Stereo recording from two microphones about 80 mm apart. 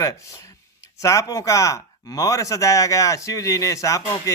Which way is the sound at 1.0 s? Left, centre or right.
Left.